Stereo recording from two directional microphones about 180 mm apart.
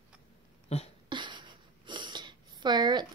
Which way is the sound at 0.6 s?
35° left (ahead or behind).